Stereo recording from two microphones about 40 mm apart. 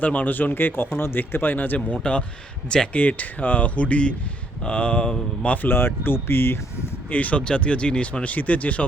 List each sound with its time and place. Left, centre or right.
0.0 s speech: left
1.3 s speech: left
1.9 s speech: left
2.9 s speech: left
5.6 s speech: left
6.2 s speech: left
7.1 s speech: left
7.4 s speech: left
8.2 s speech: left